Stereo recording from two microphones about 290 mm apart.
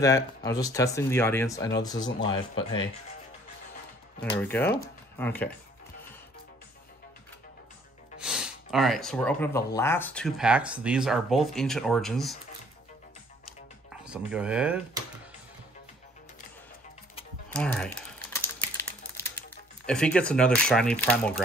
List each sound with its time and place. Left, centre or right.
0.0 s speech: centre
4.4 s speech: centre
8.2 s speech: centre
14.0 s speech: centre
17.5 s typing: centre
19.9 s speech: centre